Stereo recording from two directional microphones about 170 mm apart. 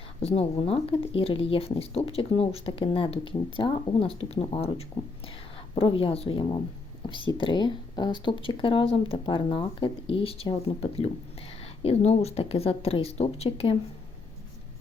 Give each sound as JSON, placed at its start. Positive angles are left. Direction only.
{"t": 0.2, "sound": "speech", "side_deg": 35}